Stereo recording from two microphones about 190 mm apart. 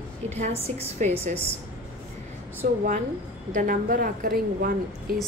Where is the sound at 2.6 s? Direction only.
50° right (ahead or behind).